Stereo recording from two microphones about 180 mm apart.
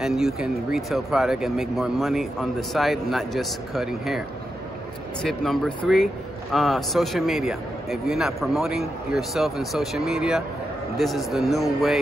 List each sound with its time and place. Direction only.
0.0 s a man's voice: centre (ahead or behind)
5.2 s a man's voice: centre (ahead or behind)